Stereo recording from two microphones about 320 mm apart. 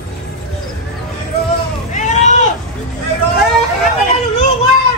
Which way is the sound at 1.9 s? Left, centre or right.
Left.